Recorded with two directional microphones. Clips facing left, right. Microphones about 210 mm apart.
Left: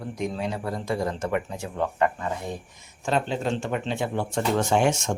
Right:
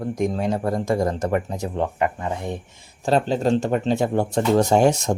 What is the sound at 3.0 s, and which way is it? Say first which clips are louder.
Speech: right 6 dB; 35° right (ahead or behind).